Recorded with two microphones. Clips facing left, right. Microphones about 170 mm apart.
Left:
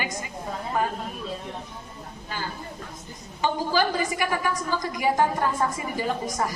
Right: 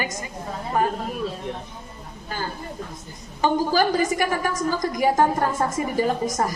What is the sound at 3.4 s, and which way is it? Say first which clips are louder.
A woman's voice: right 4 dB; 45° right (ahead or behind).